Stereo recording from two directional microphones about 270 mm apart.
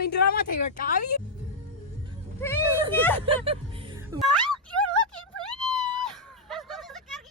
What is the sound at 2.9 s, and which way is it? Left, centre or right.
Speech, centre.